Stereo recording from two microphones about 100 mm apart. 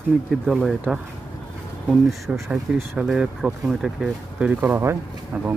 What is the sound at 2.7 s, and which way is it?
Speech, 20° right (ahead or behind).